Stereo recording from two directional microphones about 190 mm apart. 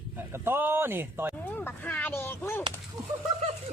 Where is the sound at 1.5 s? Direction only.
10° left (ahead or behind).